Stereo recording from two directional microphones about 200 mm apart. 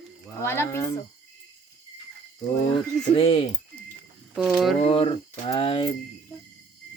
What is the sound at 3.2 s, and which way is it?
Speech, 25° left (ahead or behind).